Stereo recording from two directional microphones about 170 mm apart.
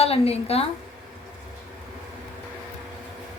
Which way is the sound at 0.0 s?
35° left (ahead or behind).